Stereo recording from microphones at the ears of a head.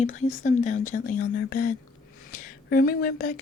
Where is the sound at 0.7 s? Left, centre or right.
Left.